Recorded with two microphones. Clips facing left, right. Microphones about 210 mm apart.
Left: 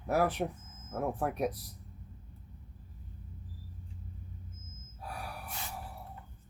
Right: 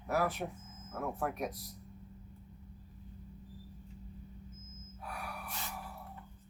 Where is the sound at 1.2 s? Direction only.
35° left (ahead or behind).